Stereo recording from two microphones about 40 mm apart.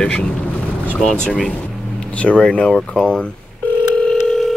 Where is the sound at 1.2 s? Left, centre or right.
Centre.